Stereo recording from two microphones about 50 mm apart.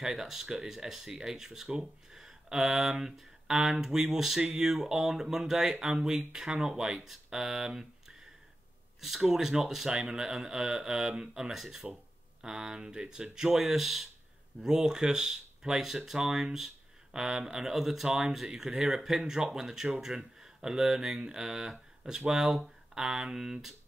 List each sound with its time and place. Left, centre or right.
0.0 s speech: centre
11.8 s a sound: right
12.4 s speech: centre